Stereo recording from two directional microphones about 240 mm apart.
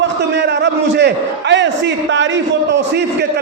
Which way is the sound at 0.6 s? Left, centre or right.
Right.